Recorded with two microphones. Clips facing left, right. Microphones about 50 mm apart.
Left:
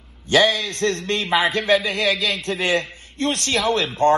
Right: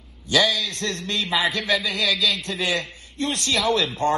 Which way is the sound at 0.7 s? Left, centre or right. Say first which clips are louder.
Left 5 dB; left.